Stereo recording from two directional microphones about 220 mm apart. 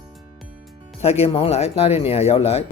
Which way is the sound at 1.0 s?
25° left (ahead or behind).